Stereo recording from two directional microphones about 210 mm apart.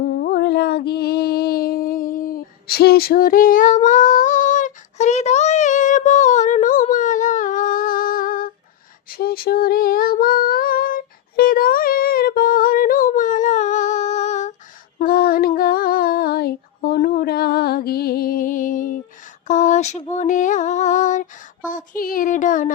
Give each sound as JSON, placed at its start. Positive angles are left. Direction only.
{"t": 0.1, "sound": "music", "side_deg": 50}
{"t": 9.0, "sound": "female singing", "side_deg": 45}
{"t": 14.9, "sound": "female singing", "side_deg": 45}
{"t": 17.2, "sound": "music", "side_deg": 45}
{"t": 19.5, "sound": "a sound", "side_deg": 35}